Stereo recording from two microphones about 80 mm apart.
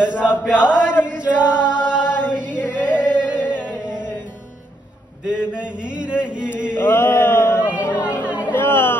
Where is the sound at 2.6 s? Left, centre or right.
Left.